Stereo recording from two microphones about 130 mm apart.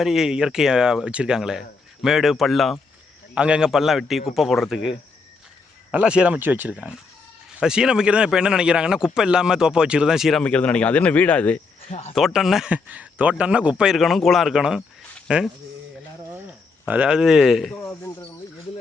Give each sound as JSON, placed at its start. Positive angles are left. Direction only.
{"t": 0.0, "sound": "speech", "side_deg": -5}
{"t": 10.4, "sound": "speech", "side_deg": 10}
{"t": 11.9, "sound": "speech", "side_deg": 50}
{"t": 12.1, "sound": "speech", "side_deg": 0}
{"t": 17.8, "sound": "cricket", "side_deg": 15}